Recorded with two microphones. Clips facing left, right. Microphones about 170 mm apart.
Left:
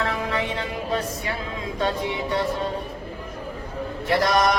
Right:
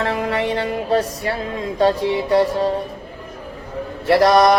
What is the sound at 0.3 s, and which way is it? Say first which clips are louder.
Speech: right 6 dB; 35° right (ahead or behind).